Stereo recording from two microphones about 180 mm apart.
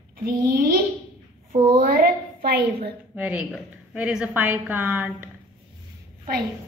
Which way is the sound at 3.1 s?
10° right (ahead or behind).